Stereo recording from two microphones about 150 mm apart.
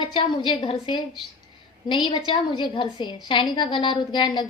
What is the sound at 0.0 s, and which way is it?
A woman's voice, 30° left (ahead or behind).